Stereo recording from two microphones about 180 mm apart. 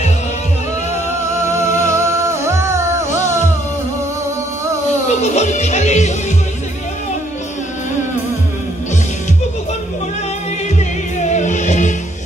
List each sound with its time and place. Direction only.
1.6 s music: 40° left (ahead or behind)
1.9 s music: 15° right (ahead or behind)
5.2 s music: 40° left (ahead or behind)
11.1 s music: 40° left (ahead or behind)